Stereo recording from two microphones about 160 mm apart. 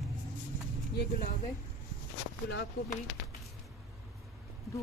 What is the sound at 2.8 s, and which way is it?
Speech, 80° left.